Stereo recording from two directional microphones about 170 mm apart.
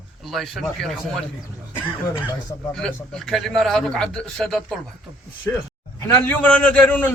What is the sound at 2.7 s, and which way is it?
A man's voice, 5° left (ahead or behind).